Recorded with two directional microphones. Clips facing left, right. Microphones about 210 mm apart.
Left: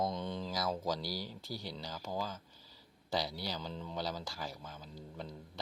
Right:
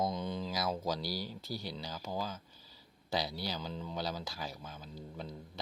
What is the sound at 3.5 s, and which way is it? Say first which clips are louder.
Speech: right 1 dB; 5° right (ahead or behind).